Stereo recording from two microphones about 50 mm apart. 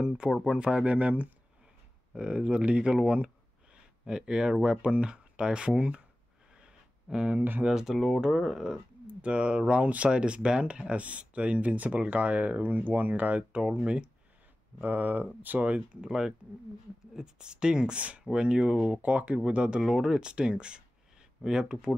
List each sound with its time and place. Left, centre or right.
0.0 s speech: centre; by 3.0 s right
4.0 s speech: centre
6.5 s a sound: centre
7.6 s speech: centre
7.9 s speech: centre
9.0 s speech: right
14.8 s speech: right
16.1 s speech: centre
19.8 s speech: centre